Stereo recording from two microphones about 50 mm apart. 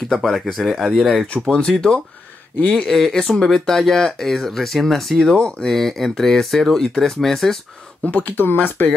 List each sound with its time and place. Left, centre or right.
0.1 s speech: centre
5.3 s speech: centre
5.7 s speech: centre
8.0 s speech: left